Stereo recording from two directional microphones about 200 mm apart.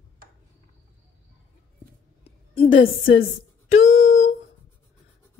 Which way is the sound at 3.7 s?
35° left (ahead or behind).